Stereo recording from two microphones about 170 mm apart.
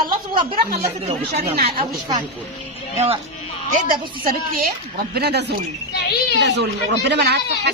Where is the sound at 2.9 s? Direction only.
35° right (ahead or behind).